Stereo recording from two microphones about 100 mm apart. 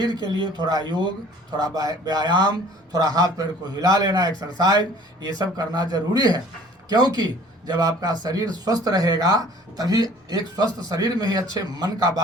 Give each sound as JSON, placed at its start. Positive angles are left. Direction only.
{"t": 0.3, "sound": "a man's voice", "side_deg": -50}